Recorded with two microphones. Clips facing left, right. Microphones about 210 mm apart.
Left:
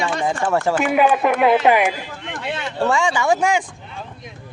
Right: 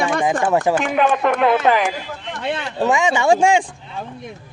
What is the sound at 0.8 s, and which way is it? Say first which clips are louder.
A woman's voice: left 1 dB; 5° left (ahead or behind).